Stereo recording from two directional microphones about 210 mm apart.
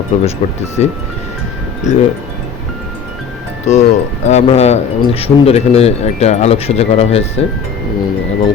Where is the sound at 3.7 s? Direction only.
35° left (ahead or behind).